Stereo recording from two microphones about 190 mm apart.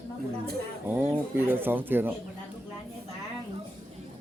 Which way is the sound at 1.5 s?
10° right (ahead or behind).